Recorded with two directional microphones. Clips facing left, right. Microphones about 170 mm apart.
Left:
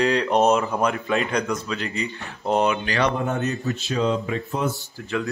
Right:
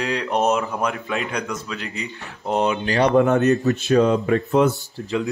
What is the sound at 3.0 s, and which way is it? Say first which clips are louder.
Speech: right 10 dB; 75° right (ahead or behind).